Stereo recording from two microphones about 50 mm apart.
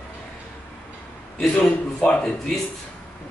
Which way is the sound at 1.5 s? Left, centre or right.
Centre.